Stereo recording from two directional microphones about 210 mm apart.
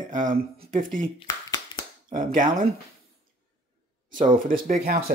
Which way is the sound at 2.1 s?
40° right (ahead or behind).